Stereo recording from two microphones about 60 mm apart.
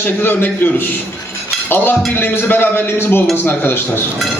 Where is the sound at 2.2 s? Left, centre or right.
Left.